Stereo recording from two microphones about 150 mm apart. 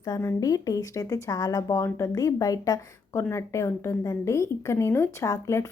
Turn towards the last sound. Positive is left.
turn(degrees=20)  # may be behind; listen again after turning